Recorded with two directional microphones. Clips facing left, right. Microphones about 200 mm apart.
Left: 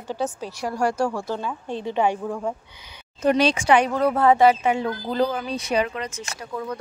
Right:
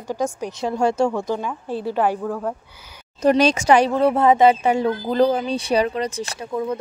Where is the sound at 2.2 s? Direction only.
10° left (ahead or behind).